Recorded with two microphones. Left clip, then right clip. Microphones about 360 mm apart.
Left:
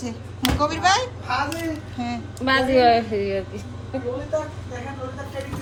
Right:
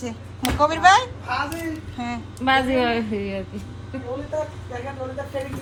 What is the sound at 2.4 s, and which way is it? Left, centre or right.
A woman's voice, right.